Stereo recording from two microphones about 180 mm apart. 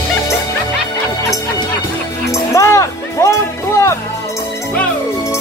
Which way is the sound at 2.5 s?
15° left (ahead or behind).